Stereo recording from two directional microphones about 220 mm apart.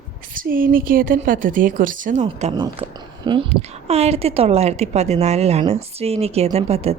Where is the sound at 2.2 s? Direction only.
25° right (ahead or behind).